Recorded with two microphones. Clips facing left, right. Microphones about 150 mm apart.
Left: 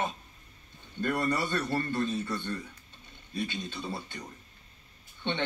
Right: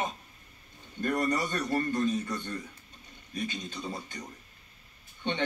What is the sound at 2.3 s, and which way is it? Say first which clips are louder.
Speech: left 1 dB; 45° right (ahead or behind).